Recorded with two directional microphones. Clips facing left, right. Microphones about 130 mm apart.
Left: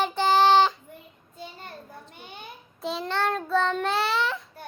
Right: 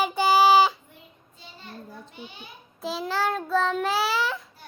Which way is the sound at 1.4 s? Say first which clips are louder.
Left 5 dB; 50° left (ahead or behind).